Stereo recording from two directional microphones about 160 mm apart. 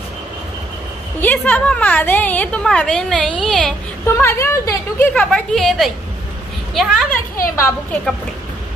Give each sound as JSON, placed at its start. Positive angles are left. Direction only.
{"t": 1.2, "sound": "a woman's voice", "side_deg": 10}
{"t": 4.0, "sound": "a woman's voice", "side_deg": 15}
{"t": 5.1, "sound": "a woman's voice", "side_deg": 5}
{"t": 7.5, "sound": "a woman's voice", "side_deg": 15}